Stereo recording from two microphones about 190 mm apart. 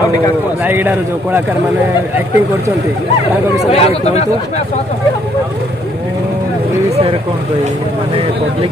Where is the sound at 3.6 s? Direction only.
35° left (ahead or behind).